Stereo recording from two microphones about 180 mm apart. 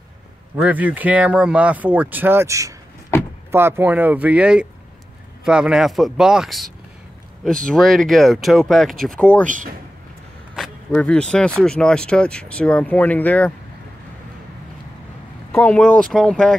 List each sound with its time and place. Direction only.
0.6 s speech: 10° right (ahead or behind); by 9.5 s 5° left (ahead or behind)
9.5 s a man's voice: 45° right (ahead or behind)
10.9 s speech: 5° left (ahead or behind)
15.5 s speech: 10° left (ahead or behind)